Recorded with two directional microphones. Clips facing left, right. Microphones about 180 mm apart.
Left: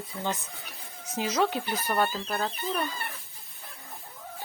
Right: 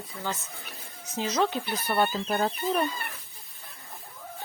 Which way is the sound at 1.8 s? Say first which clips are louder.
Right 2 dB; 5° right (ahead or behind).